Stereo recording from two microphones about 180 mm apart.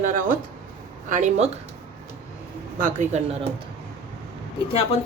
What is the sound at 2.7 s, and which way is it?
Speech, 45° right (ahead or behind).